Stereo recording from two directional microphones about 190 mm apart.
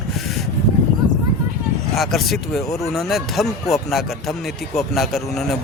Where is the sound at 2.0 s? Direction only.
Centre (ahead or behind).